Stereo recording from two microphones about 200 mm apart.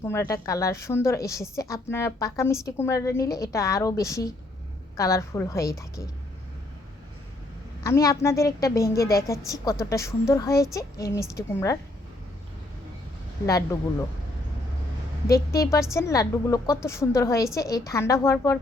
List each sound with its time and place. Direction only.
0.0 s a woman's voice: 15° left (ahead or behind)
7.9 s a woman's voice: 15° left (ahead or behind)
13.4 s a woman's voice: 15° left (ahead or behind)
16.0 s a woman's voice: 15° left (ahead or behind)